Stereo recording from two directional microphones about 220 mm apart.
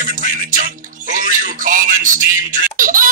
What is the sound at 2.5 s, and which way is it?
Baby laughter, 40° right (ahead or behind).